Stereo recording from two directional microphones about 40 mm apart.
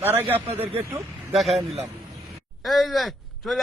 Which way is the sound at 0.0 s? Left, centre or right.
Right.